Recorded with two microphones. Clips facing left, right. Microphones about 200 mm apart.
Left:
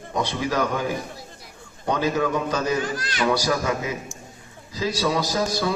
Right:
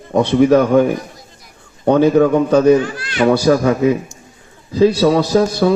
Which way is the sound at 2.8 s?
40° left (ahead or behind).